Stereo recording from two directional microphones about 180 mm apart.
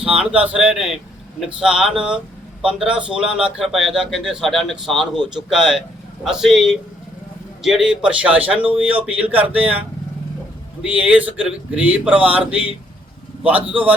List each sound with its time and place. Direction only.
0.0 s speech: 5° right (ahead or behind)
10.8 s speech: 5° right (ahead or behind)